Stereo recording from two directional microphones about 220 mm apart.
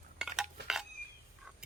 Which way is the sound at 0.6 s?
5° right (ahead or behind).